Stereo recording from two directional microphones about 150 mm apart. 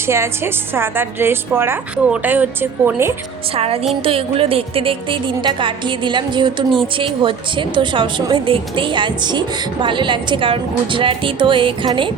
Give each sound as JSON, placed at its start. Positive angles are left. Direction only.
{"t": 0.1, "sound": "a woman's voice", "side_deg": -15}
{"t": 3.5, "sound": "a woman's voice", "side_deg": -40}